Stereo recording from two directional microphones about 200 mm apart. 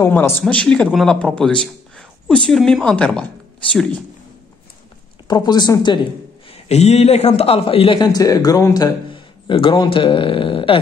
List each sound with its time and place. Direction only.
0.0 s a man's voice: 10° left (ahead or behind)
5.3 s a man's voice: 20° left (ahead or behind)
6.7 s a man's voice: 35° left (ahead or behind)